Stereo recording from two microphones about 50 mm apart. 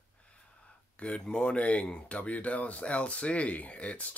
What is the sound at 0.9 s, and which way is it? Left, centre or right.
Speech, left.